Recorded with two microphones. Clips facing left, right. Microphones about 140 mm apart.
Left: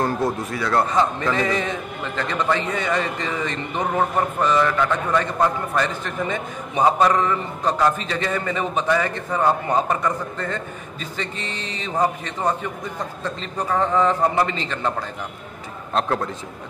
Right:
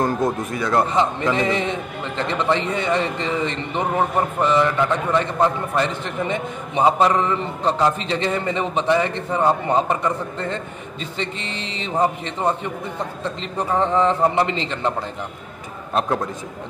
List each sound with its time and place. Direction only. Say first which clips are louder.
0.0 s a man's voice: right 2 dB; 20° right (ahead or behind)
15.9 s a man's voice: right 1 dB; 10° right (ahead or behind)